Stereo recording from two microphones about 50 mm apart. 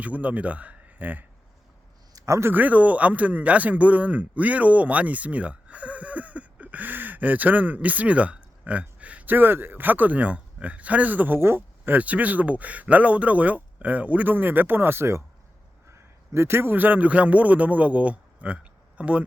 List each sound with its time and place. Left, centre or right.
0.0 s speech: right
2.2 s speech: right
2.5 s speech: right
11.3 s speech: right
11.9 s a man's voice: right